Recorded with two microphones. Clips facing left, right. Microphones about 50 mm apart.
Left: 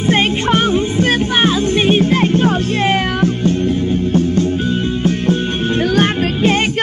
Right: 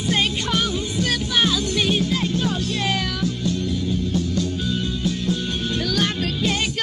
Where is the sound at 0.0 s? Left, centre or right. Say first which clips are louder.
Left 8 dB; left.